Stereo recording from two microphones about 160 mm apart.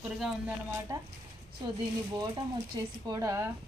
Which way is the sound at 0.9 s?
20° right (ahead or behind).